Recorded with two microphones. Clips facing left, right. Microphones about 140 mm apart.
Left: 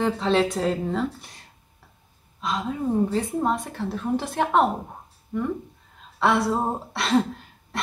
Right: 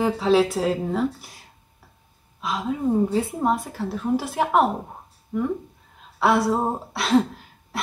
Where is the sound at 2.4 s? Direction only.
5° right (ahead or behind).